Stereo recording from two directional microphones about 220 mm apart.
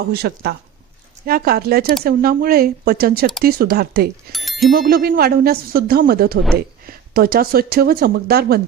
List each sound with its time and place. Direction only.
0.1 s speech: 45° right (ahead or behind)
4.3 s bicycle bell: centre (ahead or behind)
4.7 s speech: 45° right (ahead or behind)